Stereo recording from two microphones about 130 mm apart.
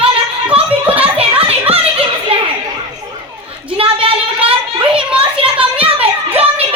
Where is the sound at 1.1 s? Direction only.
50° right (ahead or behind).